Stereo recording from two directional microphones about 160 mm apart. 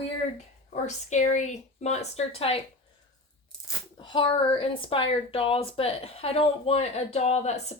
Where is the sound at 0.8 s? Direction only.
50° left (ahead or behind).